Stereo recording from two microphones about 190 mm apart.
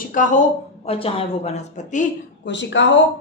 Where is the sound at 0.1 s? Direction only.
40° left (ahead or behind).